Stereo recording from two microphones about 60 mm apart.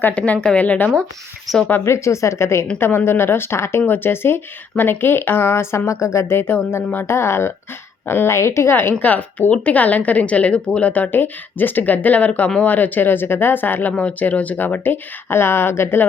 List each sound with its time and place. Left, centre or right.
0.1 s speech: left
1.8 s a woman's voice: left
2.7 s a woman's voice: left